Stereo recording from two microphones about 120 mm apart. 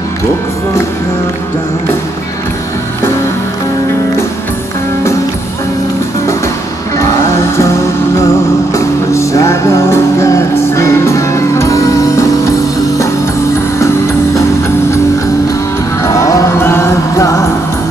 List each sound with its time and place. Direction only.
8.7 s music: 25° left (ahead or behind)
16.0 s music: 25° left (ahead or behind)